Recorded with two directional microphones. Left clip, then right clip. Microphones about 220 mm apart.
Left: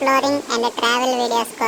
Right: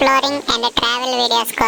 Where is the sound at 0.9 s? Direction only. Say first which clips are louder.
Right 1 dB; 40° right (ahead or behind).